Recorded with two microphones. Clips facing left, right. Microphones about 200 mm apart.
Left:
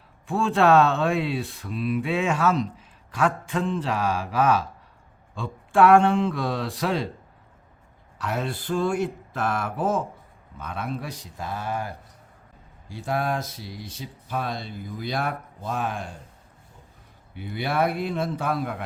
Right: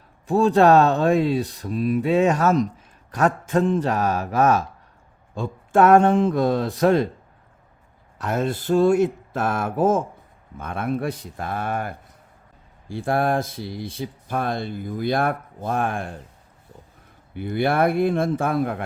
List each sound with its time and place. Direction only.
0.3 s speech: 40° right (ahead or behind)
8.2 s speech: 45° right (ahead or behind)
17.3 s speech: 50° right (ahead or behind)